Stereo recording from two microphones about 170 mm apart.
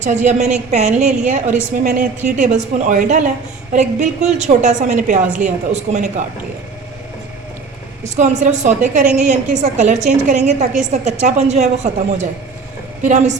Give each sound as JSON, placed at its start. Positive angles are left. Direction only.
{"t": 0.0, "sound": "a woman's voice", "side_deg": -45}
{"t": 8.0, "sound": "a woman's voice", "side_deg": -45}